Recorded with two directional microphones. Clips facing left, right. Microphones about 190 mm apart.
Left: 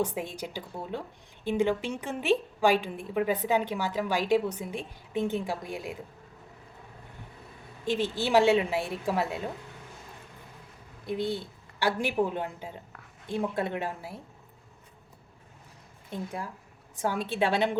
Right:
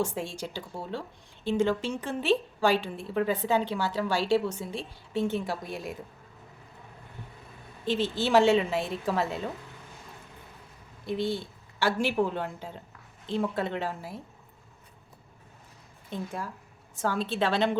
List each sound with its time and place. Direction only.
0.0 s a woman's voice: 15° left (ahead or behind)
7.9 s a woman's voice: 15° left (ahead or behind)
11.0 s a woman's voice: 15° left (ahead or behind)
16.0 s a woman's voice: 15° left (ahead or behind)